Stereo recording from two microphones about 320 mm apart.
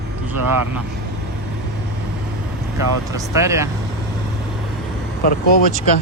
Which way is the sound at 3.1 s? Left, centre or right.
Centre.